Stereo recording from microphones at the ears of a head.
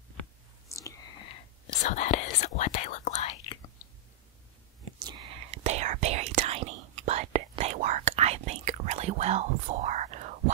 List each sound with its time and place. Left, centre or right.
0.9 s whispering: left
4.9 s whispering: right